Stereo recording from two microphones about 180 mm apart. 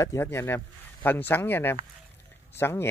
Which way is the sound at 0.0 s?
15° left (ahead or behind).